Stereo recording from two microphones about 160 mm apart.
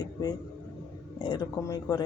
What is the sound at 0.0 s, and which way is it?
Speech, 25° left (ahead or behind).